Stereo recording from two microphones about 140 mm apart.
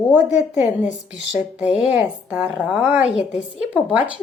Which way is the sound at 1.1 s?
10° right (ahead or behind).